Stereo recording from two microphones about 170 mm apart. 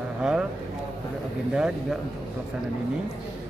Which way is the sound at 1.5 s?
5° right (ahead or behind).